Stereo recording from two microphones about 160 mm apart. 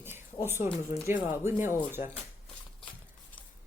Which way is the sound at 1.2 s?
15° right (ahead or behind).